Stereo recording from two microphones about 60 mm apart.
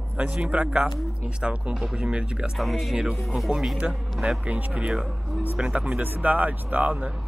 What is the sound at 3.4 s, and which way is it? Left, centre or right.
Speech, centre.